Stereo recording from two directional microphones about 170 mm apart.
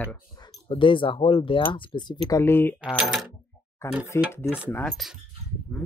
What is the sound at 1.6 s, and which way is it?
Speech, 15° left (ahead or behind).